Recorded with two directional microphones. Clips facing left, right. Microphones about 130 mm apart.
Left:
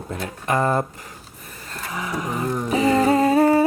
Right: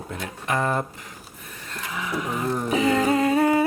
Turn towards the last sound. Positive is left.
turn(degrees=40)  # may be behind; listen again after turning